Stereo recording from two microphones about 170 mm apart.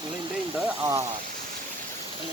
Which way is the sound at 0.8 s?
20° right (ahead or behind).